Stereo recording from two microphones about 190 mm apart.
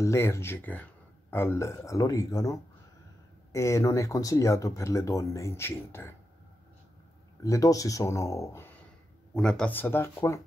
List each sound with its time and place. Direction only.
0.0 s speech: 15° left (ahead or behind)
7.4 s speech: 15° left (ahead or behind)